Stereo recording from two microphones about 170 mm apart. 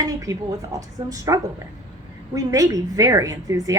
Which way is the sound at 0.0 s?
20° right (ahead or behind).